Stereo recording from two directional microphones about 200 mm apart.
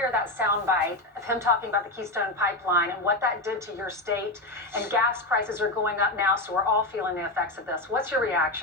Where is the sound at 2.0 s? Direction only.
15° right (ahead or behind).